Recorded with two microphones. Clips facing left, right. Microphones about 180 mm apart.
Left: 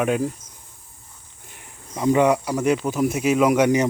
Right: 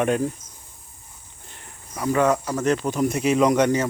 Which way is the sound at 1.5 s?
15° left (ahead or behind).